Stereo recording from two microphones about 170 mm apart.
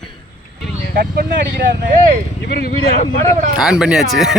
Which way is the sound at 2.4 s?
65° left (ahead or behind).